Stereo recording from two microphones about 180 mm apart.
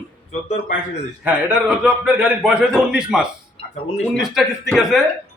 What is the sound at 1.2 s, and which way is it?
A man's voice, 10° right (ahead or behind).